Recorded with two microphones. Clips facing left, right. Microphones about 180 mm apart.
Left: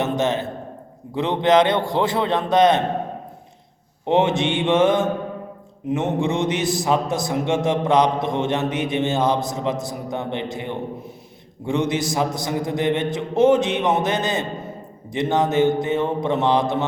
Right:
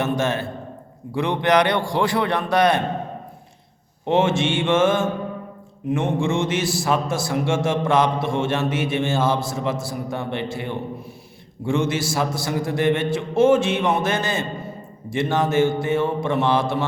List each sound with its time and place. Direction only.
0.0 s a man's voice: 20° left (ahead or behind)
4.0 s a man's voice: 20° left (ahead or behind)